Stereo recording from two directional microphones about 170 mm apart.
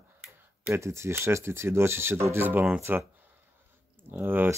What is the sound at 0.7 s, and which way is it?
Speech, 15° right (ahead or behind).